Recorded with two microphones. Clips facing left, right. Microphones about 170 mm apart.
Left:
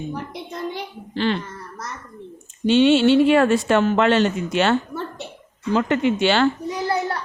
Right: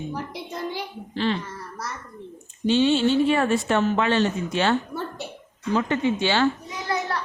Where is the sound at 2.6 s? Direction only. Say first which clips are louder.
Left 5 dB; 75° left (ahead or behind).